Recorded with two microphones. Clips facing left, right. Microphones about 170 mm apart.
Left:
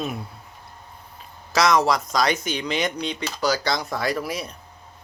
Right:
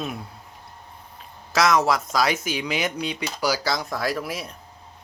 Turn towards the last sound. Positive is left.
turn(degrees=0)  # may be behind; listen again after turning